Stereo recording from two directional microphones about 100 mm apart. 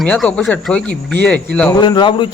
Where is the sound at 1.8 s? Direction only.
50° left (ahead or behind).